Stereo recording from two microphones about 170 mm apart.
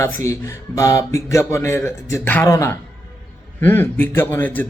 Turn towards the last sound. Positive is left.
turn(degrees=10)  # may be behind; listen again after turning